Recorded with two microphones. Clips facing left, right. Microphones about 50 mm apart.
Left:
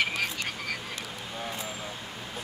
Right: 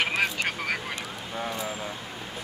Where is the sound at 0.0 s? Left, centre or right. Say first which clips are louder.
Right 4 dB; right.